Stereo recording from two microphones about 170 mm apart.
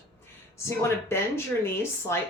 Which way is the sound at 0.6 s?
15° left (ahead or behind).